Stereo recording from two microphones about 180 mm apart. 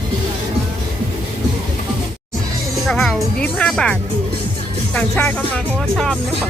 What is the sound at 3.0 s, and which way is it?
Music, 5° left (ahead or behind).